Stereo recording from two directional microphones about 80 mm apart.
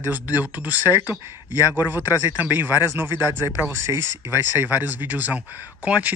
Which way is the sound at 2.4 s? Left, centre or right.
Right.